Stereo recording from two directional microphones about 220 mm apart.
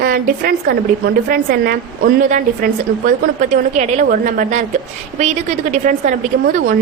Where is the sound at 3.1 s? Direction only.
35° right (ahead or behind).